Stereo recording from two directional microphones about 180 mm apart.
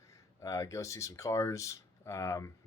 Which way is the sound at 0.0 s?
15° left (ahead or behind).